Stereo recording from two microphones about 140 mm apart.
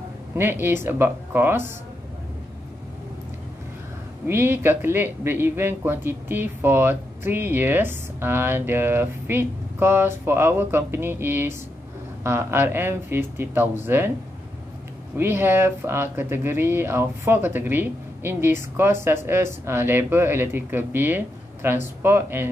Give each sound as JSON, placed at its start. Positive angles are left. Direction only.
{"t": 0.4, "sound": "a man's voice", "side_deg": -15}
{"t": 4.3, "sound": "a man's voice", "side_deg": -15}
{"t": 15.1, "sound": "a man's voice", "side_deg": -15}